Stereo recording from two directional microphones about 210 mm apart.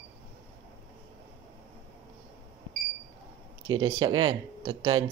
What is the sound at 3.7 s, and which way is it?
Speech, 20° right (ahead or behind).